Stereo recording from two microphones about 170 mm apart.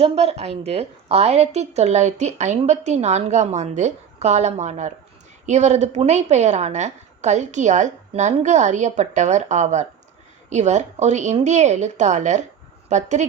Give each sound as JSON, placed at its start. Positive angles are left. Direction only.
{"t": 0.0, "sound": "a woman's voice", "side_deg": -35}